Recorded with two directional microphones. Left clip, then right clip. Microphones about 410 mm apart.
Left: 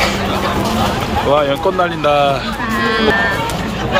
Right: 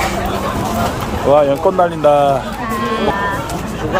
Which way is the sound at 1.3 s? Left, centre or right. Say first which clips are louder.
Right 4 dB; right.